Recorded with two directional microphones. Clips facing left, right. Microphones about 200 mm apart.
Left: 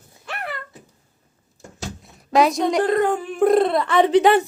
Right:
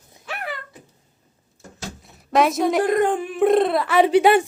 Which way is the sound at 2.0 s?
Centre (ahead or behind).